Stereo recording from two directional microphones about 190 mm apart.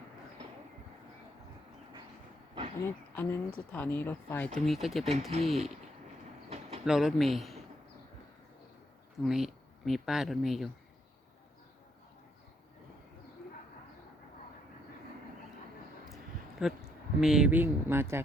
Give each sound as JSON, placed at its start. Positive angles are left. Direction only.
{"t": 2.8, "sound": "speech", "side_deg": 15}
{"t": 6.5, "sound": "pigeon", "side_deg": -35}
{"t": 6.8, "sound": "speech", "side_deg": 0}
{"t": 9.2, "sound": "speech", "side_deg": 0}
{"t": 16.6, "sound": "speech", "side_deg": 0}